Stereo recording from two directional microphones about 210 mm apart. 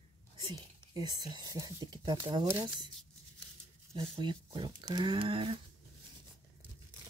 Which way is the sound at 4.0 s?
25° right (ahead or behind).